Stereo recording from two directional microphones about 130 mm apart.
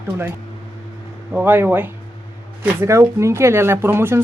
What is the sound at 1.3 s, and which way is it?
Speech, 15° right (ahead or behind).